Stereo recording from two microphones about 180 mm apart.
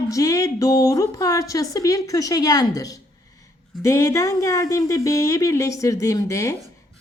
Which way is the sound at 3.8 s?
15° left (ahead or behind).